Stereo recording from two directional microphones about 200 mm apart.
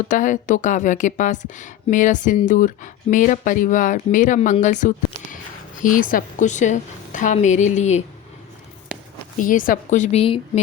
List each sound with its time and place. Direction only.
0.1 s speech: 40° left (ahead or behind)
8.9 s a sound: 5° right (ahead or behind)
9.4 s speech: 40° left (ahead or behind)